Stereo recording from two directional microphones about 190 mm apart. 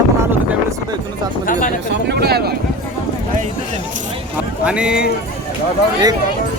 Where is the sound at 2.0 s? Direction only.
55° right (ahead or behind).